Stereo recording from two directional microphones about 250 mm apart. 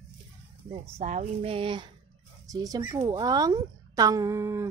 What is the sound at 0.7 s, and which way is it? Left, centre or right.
Speech, right.